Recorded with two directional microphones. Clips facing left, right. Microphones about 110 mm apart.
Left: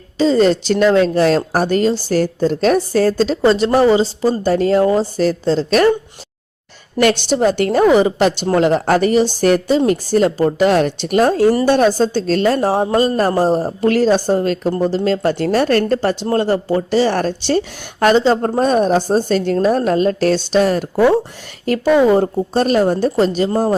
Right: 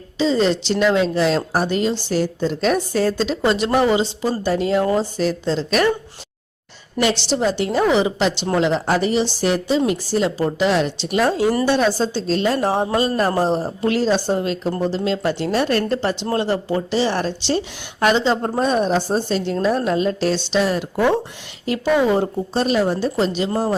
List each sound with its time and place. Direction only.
0.2 s a woman's voice: 45° left (ahead or behind)
7.0 s a woman's voice: 55° left (ahead or behind)
12.5 s a woman's voice: 35° left (ahead or behind)
13.8 s a woman's voice: 50° left (ahead or behind)